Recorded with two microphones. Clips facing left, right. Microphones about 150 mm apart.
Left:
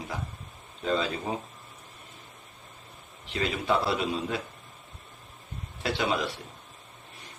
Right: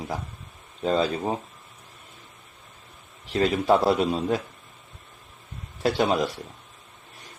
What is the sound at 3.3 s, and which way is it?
A man's voice, 40° right (ahead or behind).